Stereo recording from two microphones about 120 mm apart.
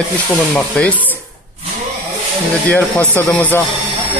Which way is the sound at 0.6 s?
10° left (ahead or behind).